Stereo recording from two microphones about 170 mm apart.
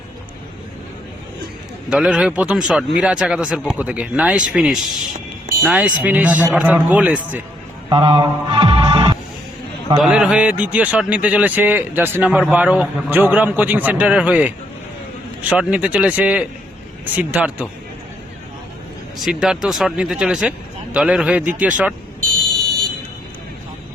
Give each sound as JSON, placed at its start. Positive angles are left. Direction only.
{"t": 1.9, "sound": "a man's voice", "side_deg": -5}
{"t": 7.9, "sound": "music", "side_deg": -30}
{"t": 10.0, "sound": "a man's voice", "side_deg": -5}
{"t": 19.2, "sound": "a man's voice", "side_deg": -5}